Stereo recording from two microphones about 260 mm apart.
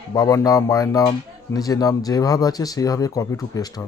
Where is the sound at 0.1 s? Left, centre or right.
Centre.